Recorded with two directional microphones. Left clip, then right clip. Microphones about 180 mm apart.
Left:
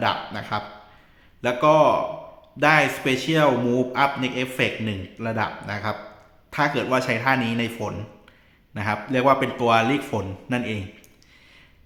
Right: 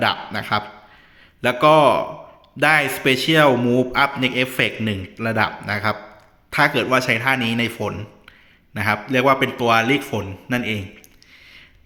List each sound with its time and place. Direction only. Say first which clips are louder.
0.0 s a man's voice: right 3 dB; 20° right (ahead or behind)